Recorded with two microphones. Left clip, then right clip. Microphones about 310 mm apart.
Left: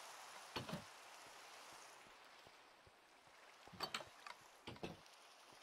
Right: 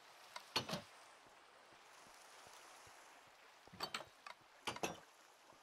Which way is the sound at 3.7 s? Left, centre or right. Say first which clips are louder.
Right 1 dB; centre.